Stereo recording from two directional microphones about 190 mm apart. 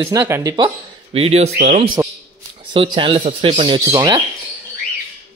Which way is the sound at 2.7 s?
25° right (ahead or behind).